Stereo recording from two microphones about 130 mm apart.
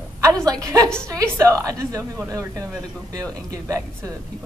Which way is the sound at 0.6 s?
25° right (ahead or behind).